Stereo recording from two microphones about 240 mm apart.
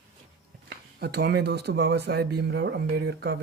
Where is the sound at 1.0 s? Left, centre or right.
Right.